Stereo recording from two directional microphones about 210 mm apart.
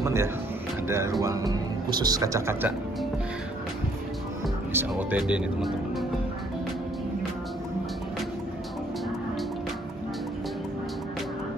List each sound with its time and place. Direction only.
0.0 s speech: 15° right (ahead or behind)
4.7 s speech: 5° right (ahead or behind)